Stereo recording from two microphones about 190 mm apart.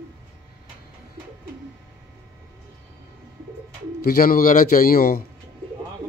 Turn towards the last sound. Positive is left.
turn(degrees=50)  # may be behind; listen again after turning